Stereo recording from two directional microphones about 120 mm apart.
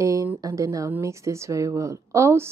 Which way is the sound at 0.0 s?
25° right (ahead or behind).